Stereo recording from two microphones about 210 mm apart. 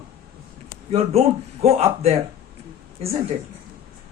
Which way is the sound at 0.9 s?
30° right (ahead or behind).